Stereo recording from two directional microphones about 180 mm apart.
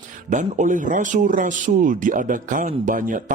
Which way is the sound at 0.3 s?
45° right (ahead or behind).